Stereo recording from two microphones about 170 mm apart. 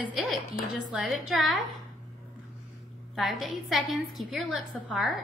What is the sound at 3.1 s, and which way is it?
A woman's voice, centre (ahead or behind).